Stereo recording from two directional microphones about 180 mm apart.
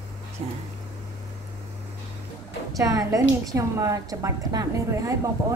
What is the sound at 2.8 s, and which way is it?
A woman's voice, 20° right (ahead or behind).